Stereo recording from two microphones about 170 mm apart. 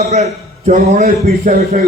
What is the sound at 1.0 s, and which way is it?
Speech, 60° right (ahead or behind).